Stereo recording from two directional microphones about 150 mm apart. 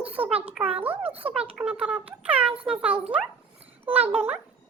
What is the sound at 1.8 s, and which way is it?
A child's voice, 10° right (ahead or behind).